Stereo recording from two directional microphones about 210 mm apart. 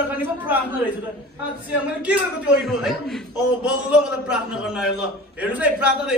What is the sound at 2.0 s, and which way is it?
A man's voice, 5° right (ahead or behind).